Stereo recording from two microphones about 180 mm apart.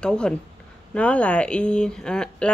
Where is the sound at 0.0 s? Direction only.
5° left (ahead or behind).